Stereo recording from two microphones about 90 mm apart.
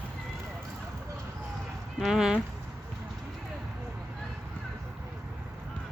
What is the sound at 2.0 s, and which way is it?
Speech, 5° right (ahead or behind).